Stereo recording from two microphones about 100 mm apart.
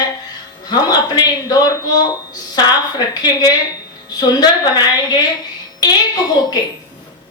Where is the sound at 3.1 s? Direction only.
40° left (ahead or behind).